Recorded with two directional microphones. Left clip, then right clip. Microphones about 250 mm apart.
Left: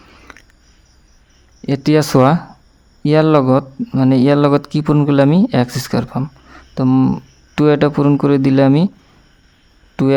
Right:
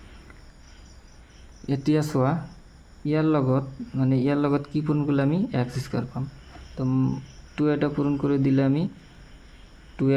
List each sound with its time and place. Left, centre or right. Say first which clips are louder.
1.6 s speech: left 10 dB; left
10.0 s speech: left 9 dB; left